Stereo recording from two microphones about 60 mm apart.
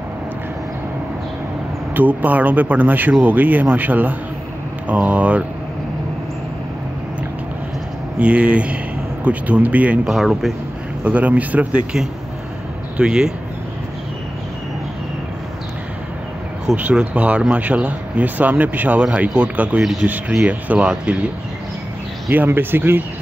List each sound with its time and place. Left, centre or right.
2.0 s speech: right
8.2 s speech: centre
10.0 s speech: centre
11.1 s speech: right
12.9 s speech: centre
16.9 s speech: centre
22.3 s speech: right